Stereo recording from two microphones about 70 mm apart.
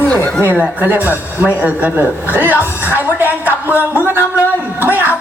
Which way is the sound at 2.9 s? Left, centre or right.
Right.